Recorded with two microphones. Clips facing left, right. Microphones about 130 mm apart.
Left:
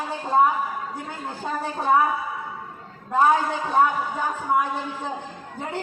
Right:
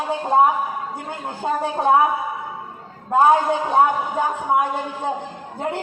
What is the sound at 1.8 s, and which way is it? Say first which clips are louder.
Speech: right 3 dB; 20° right (ahead or behind).